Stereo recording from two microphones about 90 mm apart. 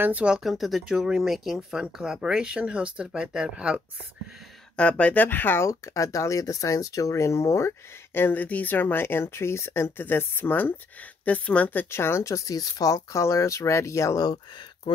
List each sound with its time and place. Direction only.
0.0 s speech: 15° right (ahead or behind)
0.4 s speech: centre (ahead or behind)
4.7 s speech: 15° left (ahead or behind)
5.7 s speech: 35° left (ahead or behind)